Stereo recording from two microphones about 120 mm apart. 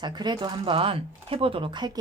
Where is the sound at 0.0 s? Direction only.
35° right (ahead or behind).